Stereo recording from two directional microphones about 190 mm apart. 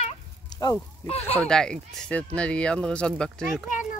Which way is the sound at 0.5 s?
15° left (ahead or behind).